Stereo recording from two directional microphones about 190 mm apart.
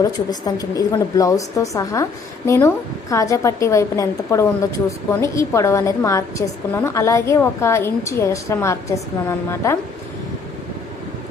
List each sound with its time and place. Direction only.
0.0 s a woman's voice: 20° left (ahead or behind)